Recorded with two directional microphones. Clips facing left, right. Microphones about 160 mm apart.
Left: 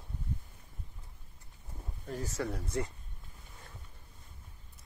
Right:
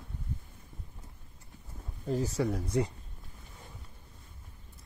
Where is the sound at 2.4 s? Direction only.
10° right (ahead or behind).